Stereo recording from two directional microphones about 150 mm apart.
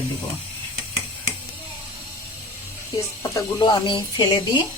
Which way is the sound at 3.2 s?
25° left (ahead or behind).